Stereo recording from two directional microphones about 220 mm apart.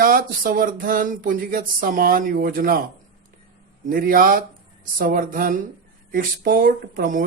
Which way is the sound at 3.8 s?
40° right (ahead or behind).